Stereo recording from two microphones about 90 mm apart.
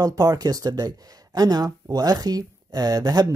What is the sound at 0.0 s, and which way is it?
Speech, 45° right (ahead or behind).